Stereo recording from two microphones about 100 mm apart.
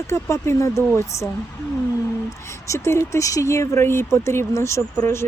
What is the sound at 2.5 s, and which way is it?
Speech, 30° left (ahead or behind).